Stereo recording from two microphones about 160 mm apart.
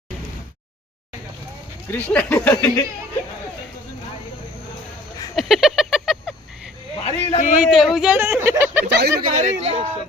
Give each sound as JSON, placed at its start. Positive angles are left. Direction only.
{"t": 1.9, "sound": "speech", "side_deg": 10}
{"t": 5.3, "sound": "a sound", "side_deg": 0}
{"t": 7.0, "sound": "a sound", "side_deg": 50}
{"t": 7.6, "sound": "a woman's voice", "side_deg": 0}
{"t": 8.9, "sound": "speech", "side_deg": -90}
{"t": 9.3, "sound": "speech", "side_deg": -45}